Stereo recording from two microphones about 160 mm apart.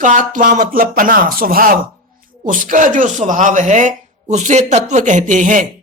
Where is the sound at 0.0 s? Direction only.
55° right (ahead or behind).